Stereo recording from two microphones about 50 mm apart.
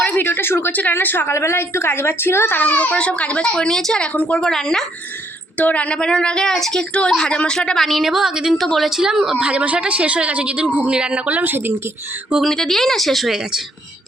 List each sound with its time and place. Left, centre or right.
0.0 s a woman's voice: left
0.7 s speech: left
1.3 s a woman's voice: left
2.5 s speech: left; by 4.0 s centre
4.1 s speech: left
4.4 s speech: centre
5.5 s speech: left
7.8 s a woman's voice: centre
8.6 s speech: centre
8.9 s a woman's voice: centre
9.4 s a woman's voice: right
11.3 s a woman's voice: right
12.5 s speech: centre